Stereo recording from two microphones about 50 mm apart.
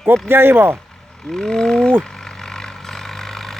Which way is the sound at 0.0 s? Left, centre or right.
Right.